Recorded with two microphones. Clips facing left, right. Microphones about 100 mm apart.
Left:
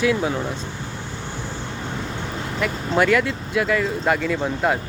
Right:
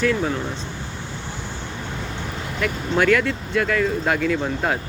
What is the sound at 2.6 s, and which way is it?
Speech, 5° left (ahead or behind).